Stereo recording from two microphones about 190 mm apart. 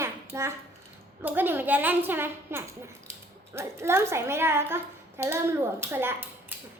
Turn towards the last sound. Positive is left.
turn(degrees=-10)  # may be behind; listen again after turning